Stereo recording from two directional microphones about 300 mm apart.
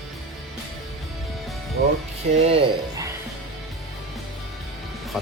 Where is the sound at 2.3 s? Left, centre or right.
Centre.